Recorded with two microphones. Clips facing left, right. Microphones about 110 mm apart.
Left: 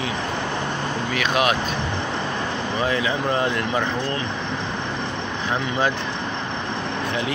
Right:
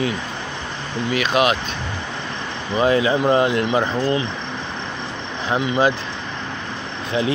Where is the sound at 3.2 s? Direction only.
15° right (ahead or behind).